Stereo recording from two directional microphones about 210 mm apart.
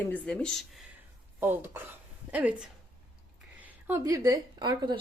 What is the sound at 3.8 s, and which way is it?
Speech, 10° right (ahead or behind).